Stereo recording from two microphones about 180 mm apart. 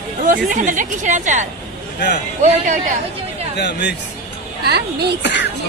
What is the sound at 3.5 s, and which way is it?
Speech, 65° left (ahead or behind).